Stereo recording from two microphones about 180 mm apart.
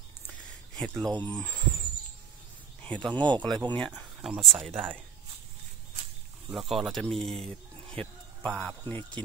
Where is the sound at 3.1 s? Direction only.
25° right (ahead or behind).